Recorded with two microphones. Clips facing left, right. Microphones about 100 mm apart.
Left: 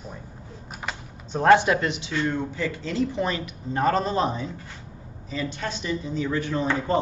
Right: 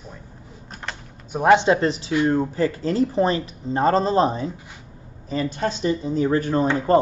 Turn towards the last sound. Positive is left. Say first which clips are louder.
# right 6 dB
turn(degrees=-45)  # may be behind; listen again after turning